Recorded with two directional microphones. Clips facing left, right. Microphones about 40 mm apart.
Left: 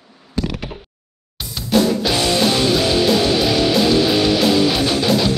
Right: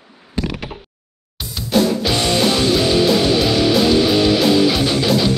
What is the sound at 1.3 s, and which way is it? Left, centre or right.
Drum kit, centre.